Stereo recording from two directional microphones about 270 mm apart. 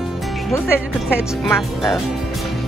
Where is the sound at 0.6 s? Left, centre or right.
Centre.